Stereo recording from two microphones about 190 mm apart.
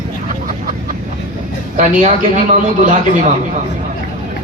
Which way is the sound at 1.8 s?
40° right (ahead or behind).